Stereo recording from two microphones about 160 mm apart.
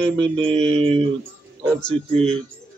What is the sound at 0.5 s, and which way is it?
Mantra, 40° right (ahead or behind).